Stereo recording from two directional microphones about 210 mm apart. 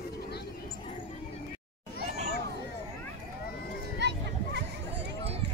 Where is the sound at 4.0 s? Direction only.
55° right (ahead or behind).